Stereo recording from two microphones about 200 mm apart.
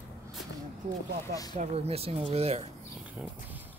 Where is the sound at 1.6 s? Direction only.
30° right (ahead or behind).